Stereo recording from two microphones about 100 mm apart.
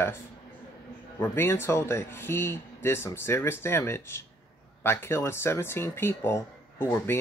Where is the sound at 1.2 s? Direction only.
25° left (ahead or behind).